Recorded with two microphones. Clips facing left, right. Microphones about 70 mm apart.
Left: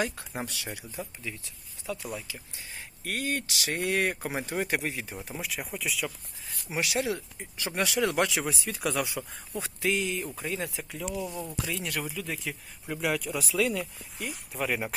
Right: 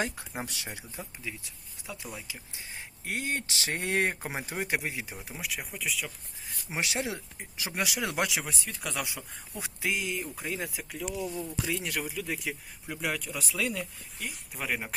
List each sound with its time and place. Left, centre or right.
0.0 s speech: right
2.1 s speech: right; by 6.1 s centre
6.7 s speech: right
8.3 s speech: centre
11.3 s speech: left
11.6 s speech: centre
12.9 s speech: centre